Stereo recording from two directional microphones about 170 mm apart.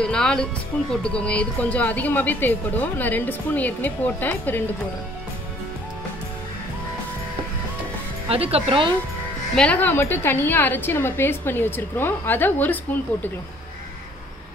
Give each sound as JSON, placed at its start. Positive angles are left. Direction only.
{"t": 0.0, "sound": "a woman's voice", "side_deg": 5}
{"t": 8.3, "sound": "speech", "side_deg": -35}
{"t": 9.6, "sound": "a woman's voice", "side_deg": 10}